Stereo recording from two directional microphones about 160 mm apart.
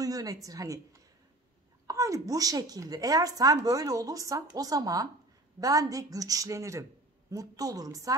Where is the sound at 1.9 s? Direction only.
20° right (ahead or behind).